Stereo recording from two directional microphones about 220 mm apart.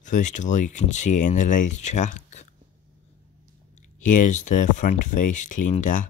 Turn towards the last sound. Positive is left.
turn(degrees=35)  # may be behind; listen again after turning